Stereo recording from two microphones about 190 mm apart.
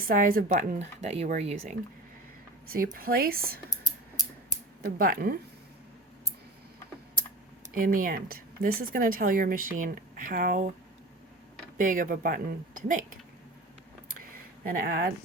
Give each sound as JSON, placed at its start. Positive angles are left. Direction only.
{"t": 0.0, "sound": "speech", "side_deg": -45}
{"t": 2.7, "sound": "speech", "side_deg": -50}
{"t": 4.9, "sound": "speech", "side_deg": -50}
{"t": 7.7, "sound": "speech", "side_deg": -50}
{"t": 11.8, "sound": "speech", "side_deg": -45}
{"t": 14.6, "sound": "speech", "side_deg": -50}